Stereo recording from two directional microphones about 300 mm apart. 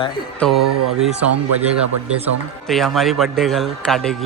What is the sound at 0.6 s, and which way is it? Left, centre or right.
Speech, right.